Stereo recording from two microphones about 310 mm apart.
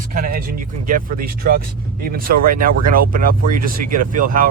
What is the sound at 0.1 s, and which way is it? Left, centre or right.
Speech, right.